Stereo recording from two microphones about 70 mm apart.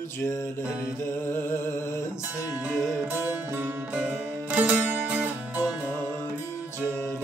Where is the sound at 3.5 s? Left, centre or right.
Right.